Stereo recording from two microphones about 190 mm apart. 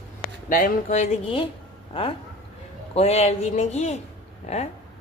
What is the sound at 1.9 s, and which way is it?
A man's voice, 30° left (ahead or behind).